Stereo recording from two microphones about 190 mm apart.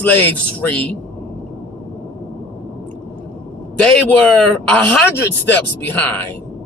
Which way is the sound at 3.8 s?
5° left (ahead or behind).